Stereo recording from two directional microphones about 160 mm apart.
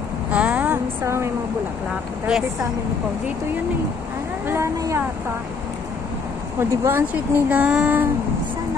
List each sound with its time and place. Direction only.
0.3 s a sound: 10° right (ahead or behind)
2.2 s speech: 5° right (ahead or behind)
4.5 s speech: 20° right (ahead or behind)
6.6 s speech: 15° right (ahead or behind)